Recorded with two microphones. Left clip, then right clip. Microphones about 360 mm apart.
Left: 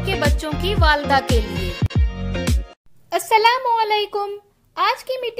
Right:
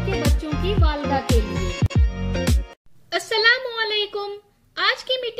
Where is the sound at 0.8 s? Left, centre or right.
Left.